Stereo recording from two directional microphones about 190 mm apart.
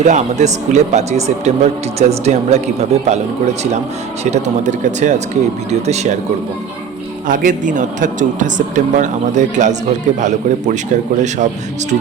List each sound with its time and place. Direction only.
0.0 s a man's voice: 40° right (ahead or behind)
7.3 s a man's voice: 45° right (ahead or behind)